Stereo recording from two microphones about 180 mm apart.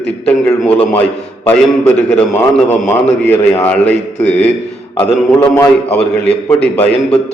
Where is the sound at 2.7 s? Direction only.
10° left (ahead or behind).